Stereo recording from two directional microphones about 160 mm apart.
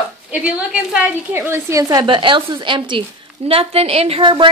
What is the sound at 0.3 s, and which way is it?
A woman's voice, 10° right (ahead or behind).